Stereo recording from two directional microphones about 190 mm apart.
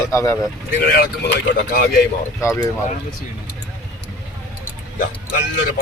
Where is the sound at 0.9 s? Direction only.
55° left (ahead or behind).